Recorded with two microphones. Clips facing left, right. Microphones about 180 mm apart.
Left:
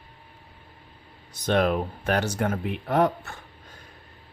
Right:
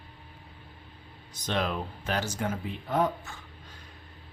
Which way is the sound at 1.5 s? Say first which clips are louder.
Left 8 dB; 55° left (ahead or behind).